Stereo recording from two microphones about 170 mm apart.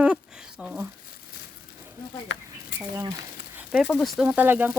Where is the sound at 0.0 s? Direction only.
5° right (ahead or behind).